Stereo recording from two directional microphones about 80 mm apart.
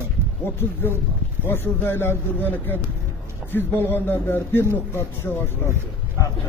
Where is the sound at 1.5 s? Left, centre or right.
Left.